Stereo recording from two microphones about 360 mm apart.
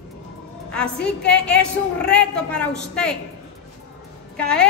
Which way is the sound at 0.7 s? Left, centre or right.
Centre.